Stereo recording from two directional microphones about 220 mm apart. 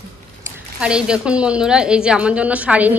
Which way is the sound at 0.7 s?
5° right (ahead or behind).